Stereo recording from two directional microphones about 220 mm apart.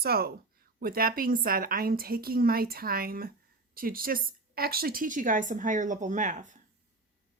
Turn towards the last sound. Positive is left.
turn(degrees=-35)  # may be behind; listen again after turning